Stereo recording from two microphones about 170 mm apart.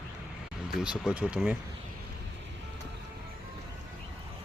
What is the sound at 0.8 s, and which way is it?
Speech, 5° right (ahead or behind).